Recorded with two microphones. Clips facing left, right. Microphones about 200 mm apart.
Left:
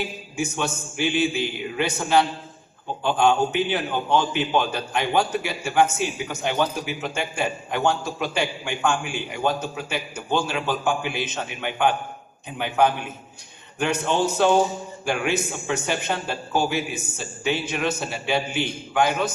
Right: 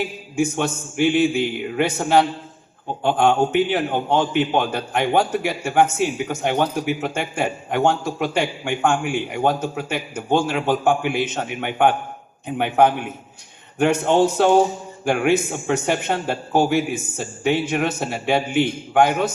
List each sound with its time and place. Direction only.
0.3 s a man's voice: 55° right (ahead or behind)